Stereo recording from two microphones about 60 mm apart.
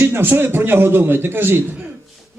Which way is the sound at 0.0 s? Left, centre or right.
Right.